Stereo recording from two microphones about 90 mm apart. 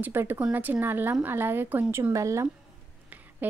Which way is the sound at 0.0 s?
25° right (ahead or behind).